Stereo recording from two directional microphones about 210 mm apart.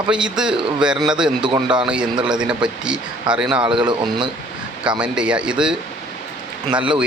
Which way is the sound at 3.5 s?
20° right (ahead or behind).